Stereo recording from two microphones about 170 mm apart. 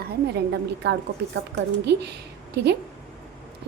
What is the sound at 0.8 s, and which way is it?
A woman's voice, 85° right.